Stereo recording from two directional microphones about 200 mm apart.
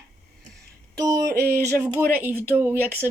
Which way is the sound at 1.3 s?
50° right (ahead or behind).